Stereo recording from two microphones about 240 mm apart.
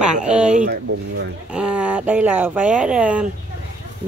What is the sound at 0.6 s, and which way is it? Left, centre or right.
Speech, right.